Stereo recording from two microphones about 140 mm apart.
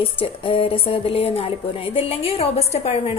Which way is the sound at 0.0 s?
40° left (ahead or behind).